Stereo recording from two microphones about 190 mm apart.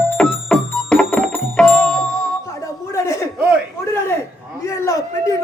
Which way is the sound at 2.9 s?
15° left (ahead or behind).